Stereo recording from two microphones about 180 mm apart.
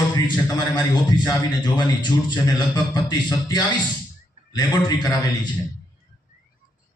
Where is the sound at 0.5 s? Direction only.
25° left (ahead or behind).